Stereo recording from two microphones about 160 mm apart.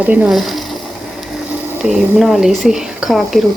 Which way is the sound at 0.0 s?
10° right (ahead or behind).